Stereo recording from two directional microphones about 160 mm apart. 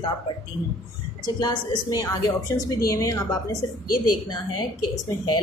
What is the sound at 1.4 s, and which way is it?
A woman's voice, 25° left (ahead or behind).